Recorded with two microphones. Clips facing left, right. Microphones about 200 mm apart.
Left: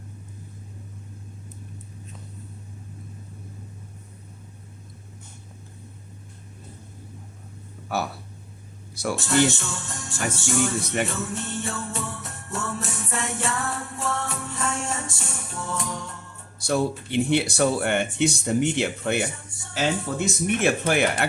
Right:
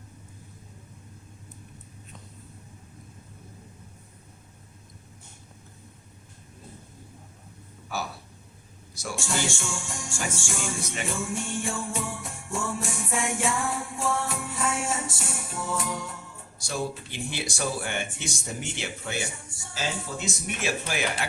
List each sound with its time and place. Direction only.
7.9 s speech: 60° left (ahead or behind)
9.1 s music: 10° right (ahead or behind)
11.1 s jingle bell: 10° right (ahead or behind)
16.6 s speech: 60° left (ahead or behind)
19.3 s speech: 10° right (ahead or behind)
19.7 s speech: 60° left (ahead or behind)